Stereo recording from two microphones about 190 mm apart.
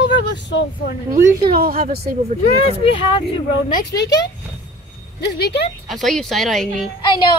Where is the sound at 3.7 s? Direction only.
65° left (ahead or behind).